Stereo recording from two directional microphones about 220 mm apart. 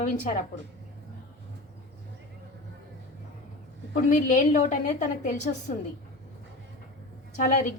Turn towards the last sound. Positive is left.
turn(degrees=35)  # may be behind; listen again after turning